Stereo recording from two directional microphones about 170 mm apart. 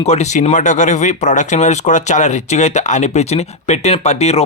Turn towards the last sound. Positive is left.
turn(degrees=40)  # may be behind; listen again after turning